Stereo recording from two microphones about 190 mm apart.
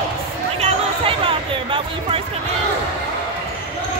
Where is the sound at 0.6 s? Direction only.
30° right (ahead or behind).